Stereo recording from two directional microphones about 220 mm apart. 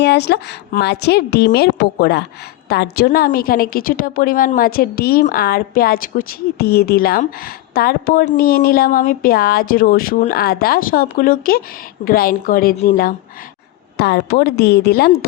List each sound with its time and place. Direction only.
0.0 s a woman's voice: 50° left (ahead or behind)